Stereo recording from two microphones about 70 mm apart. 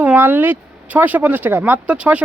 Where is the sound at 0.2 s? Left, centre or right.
Right.